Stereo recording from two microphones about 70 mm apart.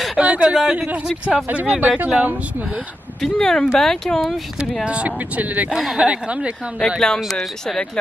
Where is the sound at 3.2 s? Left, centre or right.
Centre.